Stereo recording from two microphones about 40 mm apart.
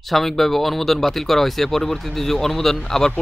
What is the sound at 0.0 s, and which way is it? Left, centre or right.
Speech, centre.